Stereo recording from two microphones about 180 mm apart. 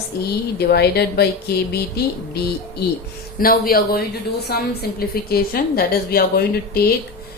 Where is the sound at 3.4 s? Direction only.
55° left (ahead or behind).